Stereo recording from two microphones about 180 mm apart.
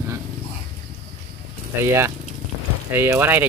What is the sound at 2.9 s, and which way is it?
Speech, 10° right (ahead or behind).